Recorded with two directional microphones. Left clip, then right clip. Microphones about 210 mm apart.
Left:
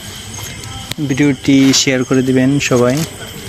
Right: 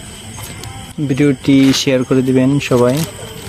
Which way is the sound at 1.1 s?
25° right (ahead or behind).